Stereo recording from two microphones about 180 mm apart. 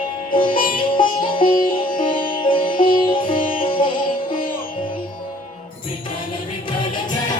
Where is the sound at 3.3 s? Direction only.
50° left (ahead or behind).